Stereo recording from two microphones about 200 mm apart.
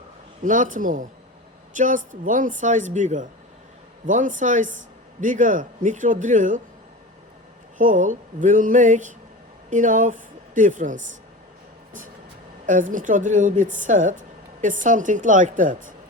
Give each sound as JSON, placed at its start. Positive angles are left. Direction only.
{"t": 0.4, "sound": "speech", "side_deg": -40}
{"t": 7.8, "sound": "a woman's voice", "side_deg": -40}
{"t": 12.6, "sound": "speech", "side_deg": -40}